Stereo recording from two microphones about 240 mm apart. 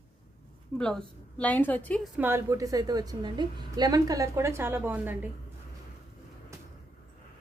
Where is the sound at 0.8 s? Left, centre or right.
Centre.